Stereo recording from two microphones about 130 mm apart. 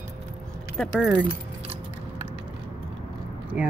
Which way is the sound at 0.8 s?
5° right (ahead or behind).